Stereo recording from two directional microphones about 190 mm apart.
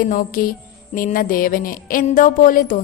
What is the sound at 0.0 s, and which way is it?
Speech, 45° left (ahead or behind).